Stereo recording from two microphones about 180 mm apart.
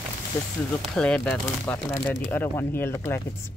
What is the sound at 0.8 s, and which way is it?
Speech, 5° left (ahead or behind).